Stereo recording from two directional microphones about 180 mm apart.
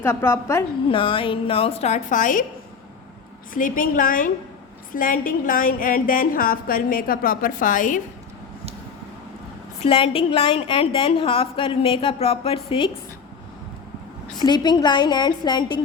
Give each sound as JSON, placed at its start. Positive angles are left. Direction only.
{"t": 0.0, "sound": "a woman's voice", "side_deg": 15}
{"t": 0.9, "sound": "a woman's voice", "side_deg": 30}
{"t": 3.5, "sound": "a woman's voice", "side_deg": 50}
{"t": 9.8, "sound": "a woman's voice", "side_deg": 30}
{"t": 14.3, "sound": "a woman's voice", "side_deg": 25}